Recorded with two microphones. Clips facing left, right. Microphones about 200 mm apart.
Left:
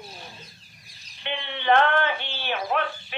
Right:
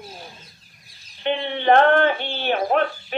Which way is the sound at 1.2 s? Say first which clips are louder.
Right 9 dB; 45° right (ahead or behind).